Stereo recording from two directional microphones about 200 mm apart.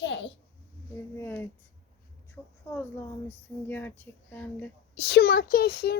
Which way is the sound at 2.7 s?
10° left (ahead or behind).